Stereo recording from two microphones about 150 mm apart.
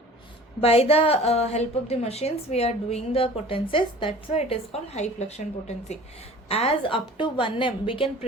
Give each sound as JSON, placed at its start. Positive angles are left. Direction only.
{"t": 0.6, "sound": "a woman's voice", "side_deg": 40}